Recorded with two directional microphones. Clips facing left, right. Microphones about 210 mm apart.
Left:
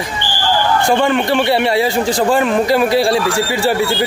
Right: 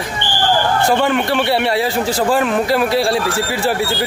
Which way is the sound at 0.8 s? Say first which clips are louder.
Left 2 dB; 5° right (ahead or behind).